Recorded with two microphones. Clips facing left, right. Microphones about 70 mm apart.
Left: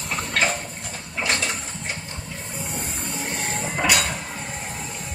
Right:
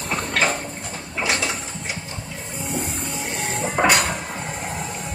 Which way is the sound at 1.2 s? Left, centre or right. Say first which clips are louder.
Right 2 dB; centre.